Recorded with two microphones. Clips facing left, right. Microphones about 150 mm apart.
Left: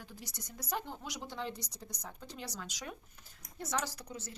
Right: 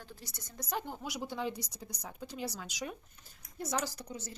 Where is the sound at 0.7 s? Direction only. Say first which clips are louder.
Right 2 dB; 5° right (ahead or behind).